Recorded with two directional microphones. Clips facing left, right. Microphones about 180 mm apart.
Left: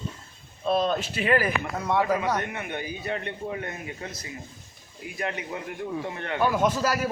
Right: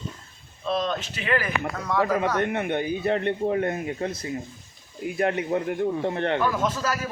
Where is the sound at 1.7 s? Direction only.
25° left (ahead or behind).